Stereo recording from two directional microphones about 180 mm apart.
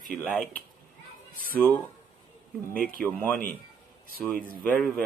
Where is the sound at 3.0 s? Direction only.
10° left (ahead or behind).